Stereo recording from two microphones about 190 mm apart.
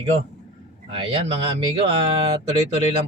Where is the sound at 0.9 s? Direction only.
30° right (ahead or behind).